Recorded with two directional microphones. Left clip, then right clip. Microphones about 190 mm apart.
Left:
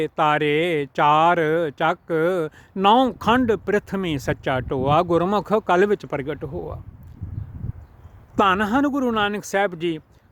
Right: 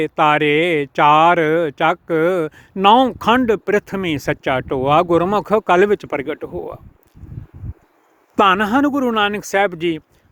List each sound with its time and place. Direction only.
0.0 s speech: 15° right (ahead or behind)
8.4 s speech: 15° right (ahead or behind)